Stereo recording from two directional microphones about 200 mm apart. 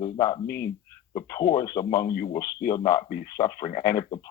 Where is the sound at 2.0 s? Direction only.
50° left (ahead or behind).